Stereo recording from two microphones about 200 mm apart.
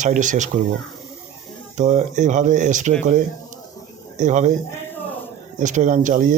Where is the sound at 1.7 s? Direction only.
35° right (ahead or behind).